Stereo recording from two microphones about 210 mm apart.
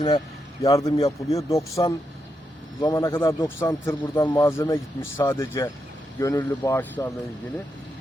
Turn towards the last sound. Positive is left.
turn(degrees=15)  # may be behind; listen again after turning